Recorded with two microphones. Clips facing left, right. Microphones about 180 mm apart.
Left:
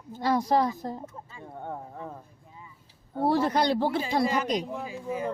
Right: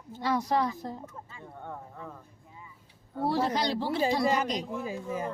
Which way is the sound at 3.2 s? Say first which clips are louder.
Left 4 dB; 55° left (ahead or behind).